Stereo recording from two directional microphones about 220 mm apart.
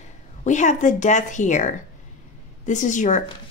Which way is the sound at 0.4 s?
35° left (ahead or behind).